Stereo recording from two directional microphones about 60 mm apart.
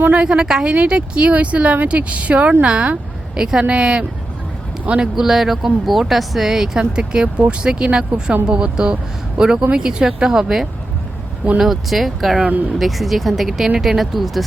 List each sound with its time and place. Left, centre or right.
0.0 s speech: right
0.3 s speech: centre